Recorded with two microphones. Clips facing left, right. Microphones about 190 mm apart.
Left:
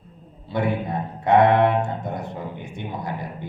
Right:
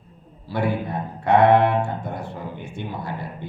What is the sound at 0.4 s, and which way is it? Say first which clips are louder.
Speech: even; 20° left (ahead or behind).